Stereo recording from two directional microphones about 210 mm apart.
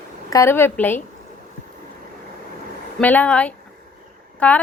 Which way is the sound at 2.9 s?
5° left (ahead or behind).